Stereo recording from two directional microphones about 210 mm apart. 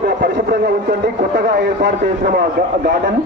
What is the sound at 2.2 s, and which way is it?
Speech, 45° right (ahead or behind).